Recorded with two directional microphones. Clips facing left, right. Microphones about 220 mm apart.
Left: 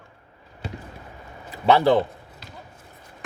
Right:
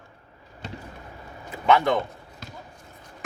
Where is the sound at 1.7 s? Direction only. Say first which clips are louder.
Left 3 dB; 35° left (ahead or behind).